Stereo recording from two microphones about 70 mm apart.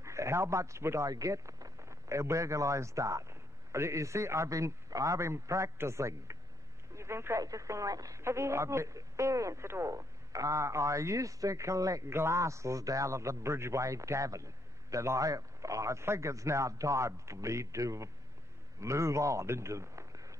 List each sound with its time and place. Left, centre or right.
0.0 s speech: right
7.4 s speech: right
8.2 s speech: right
12.1 s a man's voice: right